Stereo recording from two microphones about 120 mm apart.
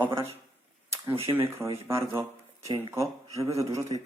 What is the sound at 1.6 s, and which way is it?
A man's voice, 25° right (ahead or behind).